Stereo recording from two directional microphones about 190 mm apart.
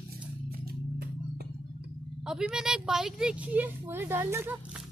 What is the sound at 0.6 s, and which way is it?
Music, 55° right (ahead or behind).